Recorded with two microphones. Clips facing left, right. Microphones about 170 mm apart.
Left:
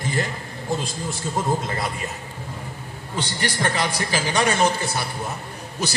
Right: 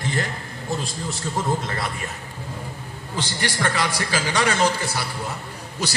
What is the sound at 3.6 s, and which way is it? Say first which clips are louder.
A man's voice: even; 25° left (ahead or behind).